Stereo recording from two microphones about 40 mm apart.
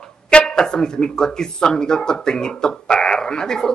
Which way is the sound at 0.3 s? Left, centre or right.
Left.